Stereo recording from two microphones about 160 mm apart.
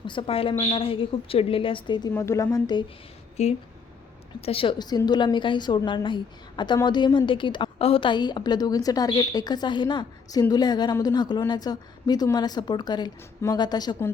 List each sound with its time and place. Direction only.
0.0 s a woman's voice: 30° left (ahead or behind)
2.1 s a woman's voice: 15° left (ahead or behind)
3.4 s a woman's voice: 45° left (ahead or behind); by 13.9 s 25° left (ahead or behind)